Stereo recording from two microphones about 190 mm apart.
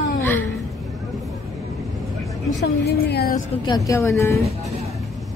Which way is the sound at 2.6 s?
60° left (ahead or behind).